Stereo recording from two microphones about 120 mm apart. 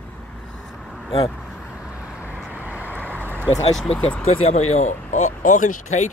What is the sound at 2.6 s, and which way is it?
Vehicle, 15° right (ahead or behind).